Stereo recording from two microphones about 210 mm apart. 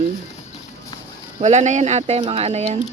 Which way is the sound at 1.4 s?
35° right (ahead or behind).